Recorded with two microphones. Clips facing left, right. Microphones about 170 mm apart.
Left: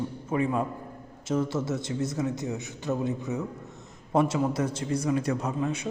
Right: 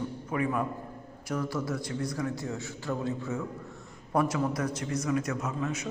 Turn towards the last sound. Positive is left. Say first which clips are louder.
# left 3 dB
turn(degrees=30)  # may be behind; listen again after turning